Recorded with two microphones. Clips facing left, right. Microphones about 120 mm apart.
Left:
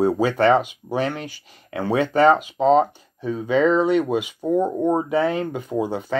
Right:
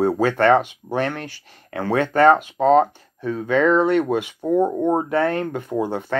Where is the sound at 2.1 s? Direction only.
55° right (ahead or behind).